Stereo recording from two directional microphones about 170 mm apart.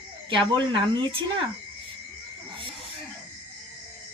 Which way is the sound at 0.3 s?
30° right (ahead or behind).